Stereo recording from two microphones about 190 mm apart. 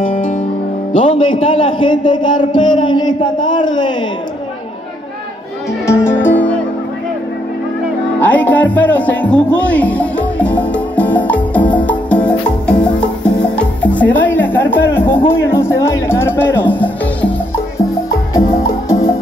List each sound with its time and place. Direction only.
0.9 s a man's voice: 25° left (ahead or behind)
5.9 s music: 10° left (ahead or behind)
8.2 s music: 10° left (ahead or behind)
18.4 s music: 50° left (ahead or behind)